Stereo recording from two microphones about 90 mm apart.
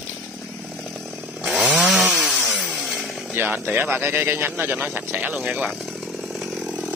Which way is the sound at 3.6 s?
20° right (ahead or behind).